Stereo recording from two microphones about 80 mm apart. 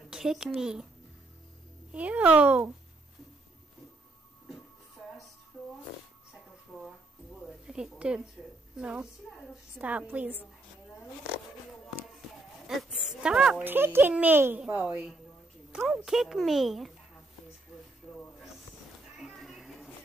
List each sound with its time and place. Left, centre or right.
0.1 s a child's voice: centre
1.9 s a child's voice: centre
7.4 s a woman's voice: centre
12.6 s a sound: centre
13.7 s a woman's voice: right; by 16.9 s centre
19.1 s cat: centre